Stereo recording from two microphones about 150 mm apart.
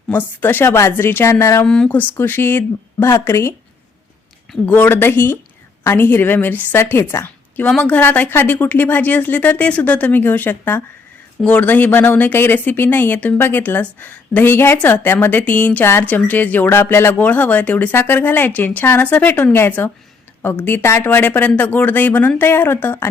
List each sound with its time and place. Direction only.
0.1 s speech: 15° left (ahead or behind)
1.6 s speech: 5° left (ahead or behind)
4.6 s speech: 15° left (ahead or behind)